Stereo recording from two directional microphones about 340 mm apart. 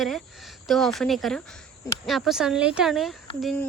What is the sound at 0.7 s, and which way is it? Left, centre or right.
Speech, centre.